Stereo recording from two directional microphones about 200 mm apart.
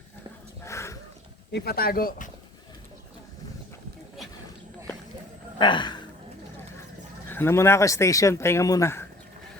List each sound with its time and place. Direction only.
0.6 s dog: 15° left (ahead or behind)
1.5 s speech: 50° left (ahead or behind)
5.5 s speech: 25° left (ahead or behind)
7.3 s speech: 10° left (ahead or behind)